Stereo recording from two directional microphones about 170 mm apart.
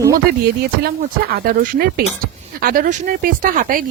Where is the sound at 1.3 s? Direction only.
60° right (ahead or behind).